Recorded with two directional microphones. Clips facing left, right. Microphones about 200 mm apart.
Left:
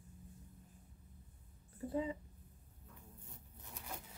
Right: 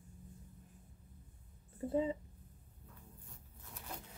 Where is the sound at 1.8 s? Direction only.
25° right (ahead or behind).